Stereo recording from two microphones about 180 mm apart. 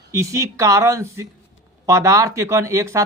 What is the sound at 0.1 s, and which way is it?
Speech, 15° right (ahead or behind).